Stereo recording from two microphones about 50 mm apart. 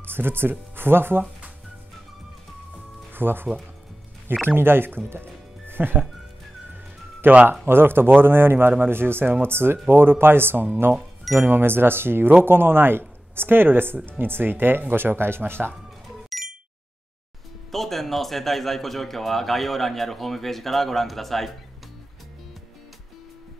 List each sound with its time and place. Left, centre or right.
0.0 s speech: right
3.1 s speech: right
4.5 s speech: right
6.7 s music: right
7.6 s speech: right
16.3 s a sound: centre
17.6 s a man's voice: centre